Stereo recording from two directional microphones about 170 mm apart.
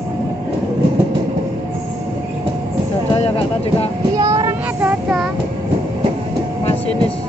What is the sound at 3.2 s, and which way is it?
Speech, 35° left (ahead or behind).